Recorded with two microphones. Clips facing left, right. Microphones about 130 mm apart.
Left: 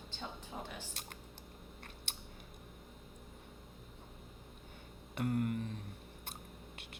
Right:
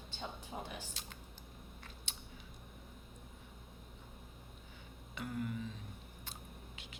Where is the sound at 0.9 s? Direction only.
55° left (ahead or behind).